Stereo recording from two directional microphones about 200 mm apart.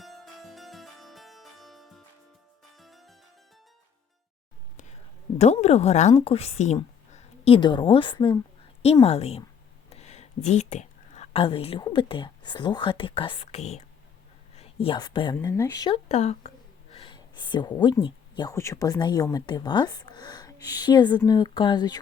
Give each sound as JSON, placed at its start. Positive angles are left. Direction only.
{"t": 0.0, "sound": "harpsichord", "side_deg": 0}
{"t": 5.4, "sound": "a woman's voice", "side_deg": 35}
{"t": 16.0, "sound": "a woman's voice", "side_deg": 35}
{"t": 16.9, "sound": "a sound", "side_deg": 25}
{"t": 18.0, "sound": "speech", "side_deg": 20}